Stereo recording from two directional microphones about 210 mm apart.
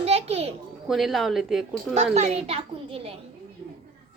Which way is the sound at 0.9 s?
Centre (ahead or behind).